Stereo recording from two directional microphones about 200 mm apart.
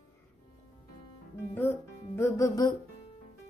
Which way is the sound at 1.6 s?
10° left (ahead or behind).